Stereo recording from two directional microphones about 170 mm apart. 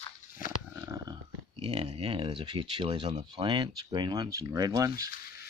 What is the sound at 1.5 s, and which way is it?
Speech, 30° right (ahead or behind).